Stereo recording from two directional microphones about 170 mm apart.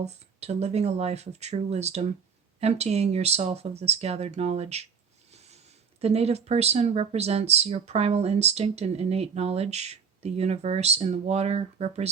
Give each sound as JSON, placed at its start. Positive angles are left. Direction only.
{"t": 0.0, "sound": "speech", "side_deg": -40}
{"t": 6.0, "sound": "speech", "side_deg": -40}